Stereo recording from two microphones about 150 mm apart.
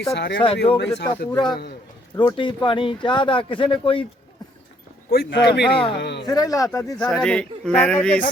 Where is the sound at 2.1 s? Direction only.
30° left (ahead or behind).